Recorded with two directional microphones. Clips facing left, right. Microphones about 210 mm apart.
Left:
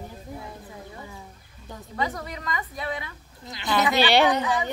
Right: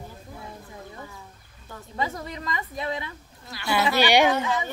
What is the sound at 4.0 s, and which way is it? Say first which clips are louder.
Speech: right 1 dB; 15° right (ahead or behind).